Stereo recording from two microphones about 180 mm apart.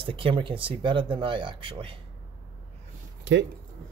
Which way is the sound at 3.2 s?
90° right.